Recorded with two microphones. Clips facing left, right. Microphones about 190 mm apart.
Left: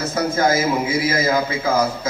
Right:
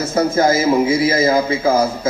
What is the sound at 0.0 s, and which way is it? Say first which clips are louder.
A man's voice: right 4 dB; 25° right (ahead or behind).